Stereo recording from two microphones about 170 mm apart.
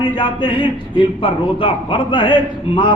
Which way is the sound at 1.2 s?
30° left (ahead or behind).